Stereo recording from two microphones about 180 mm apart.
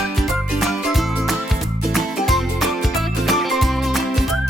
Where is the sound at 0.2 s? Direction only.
Centre (ahead or behind).